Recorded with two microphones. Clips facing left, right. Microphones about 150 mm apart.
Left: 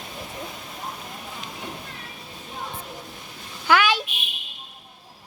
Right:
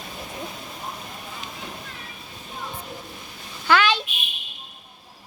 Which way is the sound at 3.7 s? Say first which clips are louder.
Even; 10° left (ahead or behind).